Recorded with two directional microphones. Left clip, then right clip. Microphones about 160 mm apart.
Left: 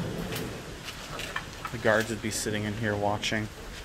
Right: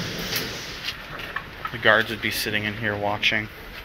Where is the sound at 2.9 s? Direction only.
10° left (ahead or behind).